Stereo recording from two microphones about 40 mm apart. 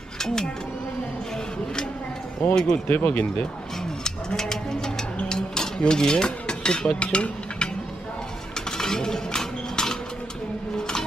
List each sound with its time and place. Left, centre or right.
0.2 s speech: centre
2.5 s speech: centre
2.9 s speech: left
4.0 s music: centre
7.0 s stir: left
8.7 s a sound: centre